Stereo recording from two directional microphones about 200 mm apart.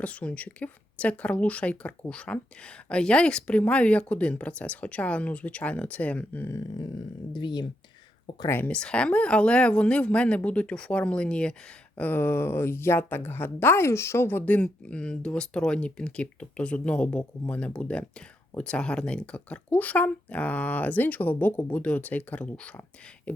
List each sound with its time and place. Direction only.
0.0 s speech: 5° left (ahead or behind); by 7.7 s 20° left (ahead or behind)
8.4 s speech: 10° left (ahead or behind)